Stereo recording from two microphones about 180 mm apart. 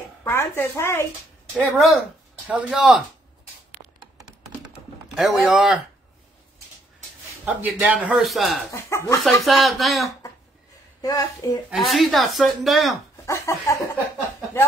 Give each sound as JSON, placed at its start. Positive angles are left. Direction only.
{"t": 0.2, "sound": "a woman's voice", "side_deg": 15}
{"t": 1.5, "sound": "speech", "side_deg": 0}
{"t": 3.8, "sound": "computer keyboard", "side_deg": -35}
{"t": 5.1, "sound": "speech", "side_deg": 0}
{"t": 7.4, "sound": "speech", "side_deg": -10}
{"t": 8.7, "sound": "a sound", "side_deg": 15}
{"t": 9.4, "sound": "speech", "side_deg": 0}
{"t": 11.0, "sound": "speech", "side_deg": 20}
{"t": 11.7, "sound": "speech", "side_deg": 0}
{"t": 13.2, "sound": "a sound", "side_deg": 15}